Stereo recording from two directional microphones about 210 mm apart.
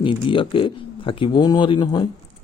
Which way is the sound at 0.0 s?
25° left (ahead or behind).